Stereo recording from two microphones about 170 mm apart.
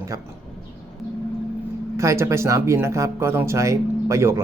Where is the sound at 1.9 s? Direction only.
15° right (ahead or behind).